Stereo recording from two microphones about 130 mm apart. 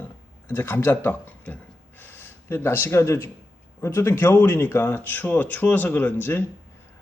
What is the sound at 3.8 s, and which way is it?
Speech, 20° left (ahead or behind).